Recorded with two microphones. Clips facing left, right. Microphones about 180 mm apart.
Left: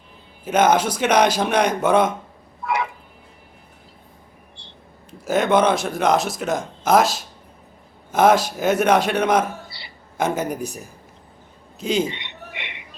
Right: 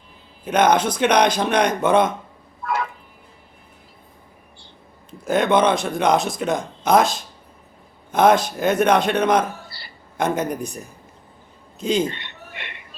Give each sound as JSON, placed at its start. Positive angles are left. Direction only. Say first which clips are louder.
{"t": 0.4, "sound": "speech", "louder": "even", "side_deg": 5}
{"t": 2.6, "sound": "a sound", "louder": "left 1 dB", "side_deg": 15}
{"t": 5.2, "sound": "speech", "louder": "even", "side_deg": 5}
{"t": 11.8, "sound": "speech", "louder": "right 1 dB", "side_deg": 5}
{"t": 12.1, "sound": "music", "louder": "left 2 dB", "side_deg": 20}